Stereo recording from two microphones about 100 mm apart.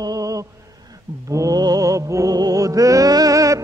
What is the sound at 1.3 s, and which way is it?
Music, 35° right (ahead or behind).